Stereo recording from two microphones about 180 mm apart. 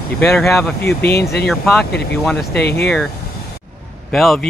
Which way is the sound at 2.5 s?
65° left (ahead or behind).